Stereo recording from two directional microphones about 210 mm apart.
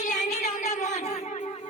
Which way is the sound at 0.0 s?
35° left (ahead or behind).